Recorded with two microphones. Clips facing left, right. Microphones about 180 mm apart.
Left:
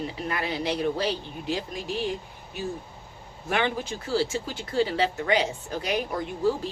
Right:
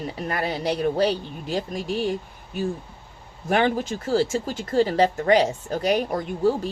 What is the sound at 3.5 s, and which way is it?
A woman's voice, 45° right (ahead or behind).